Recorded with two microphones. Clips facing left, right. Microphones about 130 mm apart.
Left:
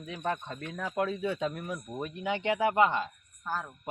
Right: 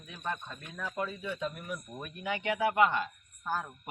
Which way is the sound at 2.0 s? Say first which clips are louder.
Left 5 dB; 20° left (ahead or behind).